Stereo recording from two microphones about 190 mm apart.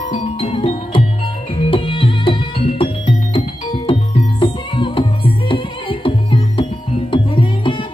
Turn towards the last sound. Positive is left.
turn(degrees=25)  # may be behind; listen again after turning